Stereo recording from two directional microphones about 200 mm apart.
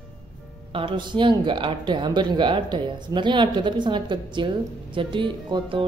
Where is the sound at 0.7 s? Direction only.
25° right (ahead or behind).